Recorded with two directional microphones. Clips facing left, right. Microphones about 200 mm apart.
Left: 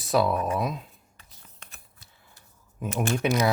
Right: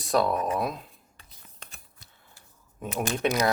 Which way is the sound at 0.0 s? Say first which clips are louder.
Left 1 dB; 5° left (ahead or behind).